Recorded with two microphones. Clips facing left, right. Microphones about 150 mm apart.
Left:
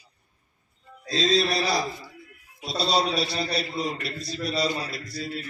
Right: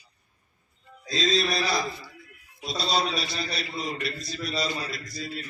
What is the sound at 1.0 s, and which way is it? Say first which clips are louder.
Speech: left 2 dB; 30° left (ahead or behind).